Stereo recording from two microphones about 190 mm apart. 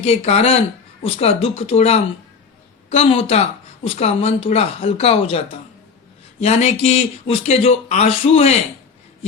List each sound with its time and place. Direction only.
0.0 s speech: 30° left (ahead or behind)
6.4 s speech: 35° left (ahead or behind)